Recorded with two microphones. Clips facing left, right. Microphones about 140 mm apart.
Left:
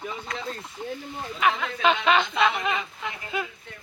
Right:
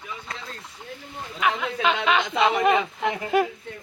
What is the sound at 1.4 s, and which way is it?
Speech, 5° right (ahead or behind).